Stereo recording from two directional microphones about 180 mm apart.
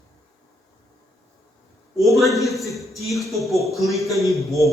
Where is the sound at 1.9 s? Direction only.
Centre (ahead or behind).